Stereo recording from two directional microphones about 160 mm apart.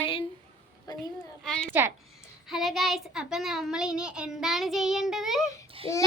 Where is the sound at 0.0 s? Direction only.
35° left (ahead or behind).